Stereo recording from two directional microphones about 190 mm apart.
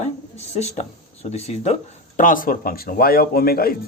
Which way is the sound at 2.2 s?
45° left (ahead or behind).